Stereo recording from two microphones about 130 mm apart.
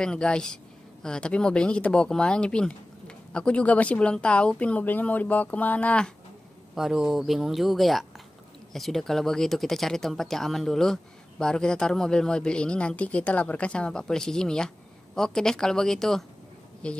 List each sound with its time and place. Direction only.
0.0 s speech: 5° left (ahead or behind)
6.7 s speech: 5° right (ahead or behind)